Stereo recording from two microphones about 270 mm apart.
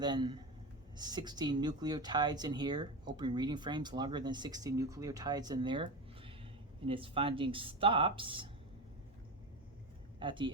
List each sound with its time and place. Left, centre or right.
0.0 s speech: centre
10.2 s speech: centre